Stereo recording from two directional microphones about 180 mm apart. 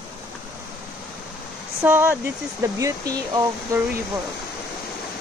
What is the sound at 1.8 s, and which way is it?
Speech, 15° right (ahead or behind).